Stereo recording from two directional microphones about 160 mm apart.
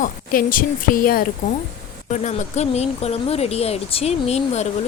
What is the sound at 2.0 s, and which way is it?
Speech, 50° left (ahead or behind).